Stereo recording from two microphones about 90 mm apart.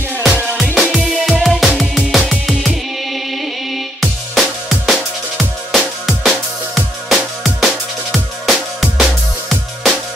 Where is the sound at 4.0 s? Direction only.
5° left (ahead or behind).